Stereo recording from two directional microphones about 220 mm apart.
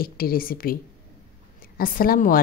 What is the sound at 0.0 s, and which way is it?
A woman's voice, 40° left (ahead or behind).